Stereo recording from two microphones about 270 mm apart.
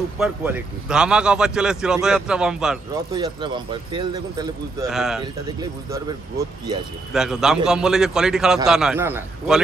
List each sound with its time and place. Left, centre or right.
0.2 s speech: centre
3.1 s speech: centre
4.8 s speech: centre
5.2 s speech: centre
7.1 s speech: centre